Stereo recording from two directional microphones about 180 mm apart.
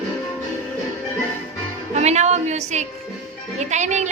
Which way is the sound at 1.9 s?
40° right (ahead or behind).